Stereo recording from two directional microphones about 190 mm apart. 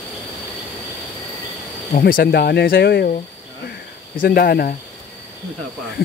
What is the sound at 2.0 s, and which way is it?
Speech, 55° left (ahead or behind).